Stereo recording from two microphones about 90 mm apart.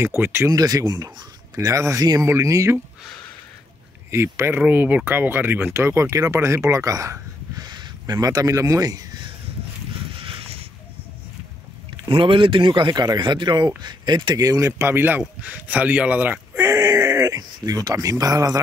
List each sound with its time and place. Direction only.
0.0 s speech: 25° right (ahead or behind)
0.5 s speech: 40° right (ahead or behind)
4.1 s speech: 30° right (ahead or behind)
4.6 s speech: 20° right (ahead or behind); by 7.6 s 40° right (ahead or behind)
7.6 s speech: 50° right (ahead or behind)
10.1 s a sound: 80° right
12.0 s speech: 70° right (ahead or behind)
12.9 s speech: 45° right (ahead or behind)
14.7 s speech: 25° right (ahead or behind)
16.6 s speech: 35° right (ahead or behind)